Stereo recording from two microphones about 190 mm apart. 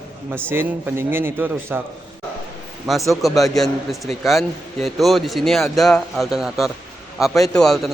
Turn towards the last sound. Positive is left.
turn(degrees=0)  # may be behind; listen again after turning